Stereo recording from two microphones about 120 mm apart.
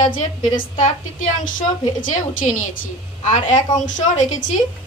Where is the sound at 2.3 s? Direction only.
90° left.